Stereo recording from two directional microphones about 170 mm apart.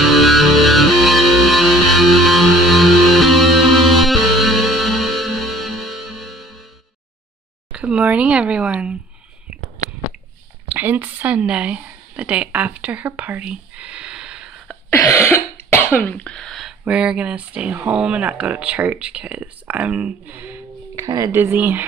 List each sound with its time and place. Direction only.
0.0 s music: centre (ahead or behind)
7.7 s speech: 5° right (ahead or behind)
10.7 s a woman's voice: 10° right (ahead or behind)
14.9 s cough: 15° left (ahead or behind)
16.0 s speech: 10° left (ahead or behind); by 20.5 s 10° right (ahead or behind)
20.9 s speech: 20° right (ahead or behind)